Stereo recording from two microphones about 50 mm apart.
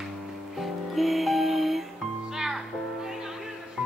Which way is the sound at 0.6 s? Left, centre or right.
Centre.